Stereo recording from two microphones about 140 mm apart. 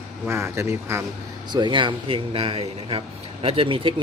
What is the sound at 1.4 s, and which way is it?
A man's voice, 35° right (ahead or behind).